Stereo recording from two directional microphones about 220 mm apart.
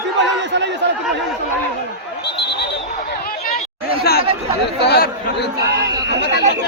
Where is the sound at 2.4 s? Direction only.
50° left (ahead or behind).